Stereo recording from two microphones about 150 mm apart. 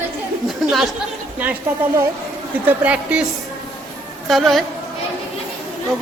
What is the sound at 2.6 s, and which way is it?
Speech, 10° right (ahead or behind).